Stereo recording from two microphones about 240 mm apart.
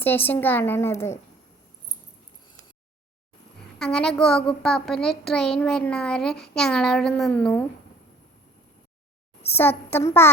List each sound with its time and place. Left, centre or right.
0.0 s a woman's voice: centre
3.8 s a child's voice: centre
6.3 s a sound: left
6.6 s a child's voice: centre
9.6 s a woman's voice: centre